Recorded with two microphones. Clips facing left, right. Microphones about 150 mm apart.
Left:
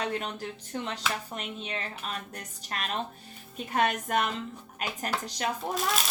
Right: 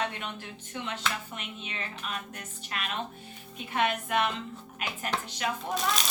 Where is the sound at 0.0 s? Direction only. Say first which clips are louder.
Left 2 dB; 40° left (ahead or behind).